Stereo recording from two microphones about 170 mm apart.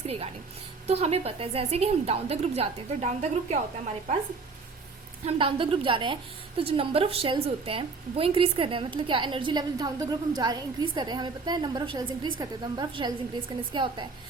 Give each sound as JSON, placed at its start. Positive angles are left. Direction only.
{"t": 0.9, "sound": "a woman's voice", "side_deg": -35}
{"t": 5.2, "sound": "a woman's voice", "side_deg": -30}